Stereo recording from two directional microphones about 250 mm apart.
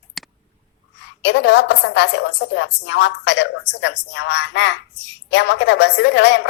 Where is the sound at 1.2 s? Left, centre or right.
Left.